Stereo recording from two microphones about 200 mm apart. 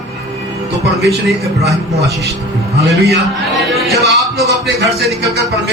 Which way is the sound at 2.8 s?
60° right (ahead or behind).